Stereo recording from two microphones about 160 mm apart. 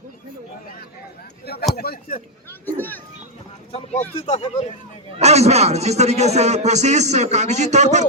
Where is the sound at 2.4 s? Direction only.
10° left (ahead or behind).